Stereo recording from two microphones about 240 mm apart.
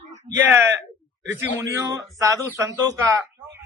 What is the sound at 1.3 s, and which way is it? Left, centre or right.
A man's voice, centre.